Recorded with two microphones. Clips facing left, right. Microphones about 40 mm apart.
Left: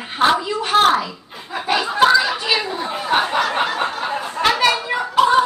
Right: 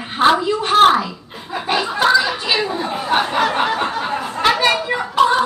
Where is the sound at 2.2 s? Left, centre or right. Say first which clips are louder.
Even; right.